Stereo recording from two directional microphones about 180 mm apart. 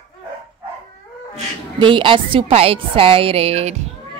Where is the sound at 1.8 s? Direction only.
25° right (ahead or behind).